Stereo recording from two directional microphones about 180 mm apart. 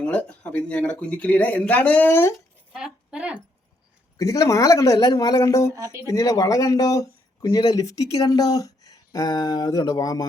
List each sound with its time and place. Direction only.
0.0 s speech: 5° left (ahead or behind)
2.7 s speech: 5° right (ahead or behind)
4.2 s speech: 20° left (ahead or behind)
5.7 s speech: 20° right (ahead or behind)
6.1 s speech: 20° left (ahead or behind)